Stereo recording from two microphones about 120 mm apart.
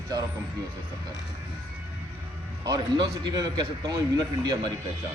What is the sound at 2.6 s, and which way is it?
Speech, 35° right (ahead or behind).